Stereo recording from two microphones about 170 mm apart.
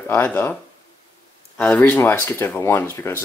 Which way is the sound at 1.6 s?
10° left (ahead or behind).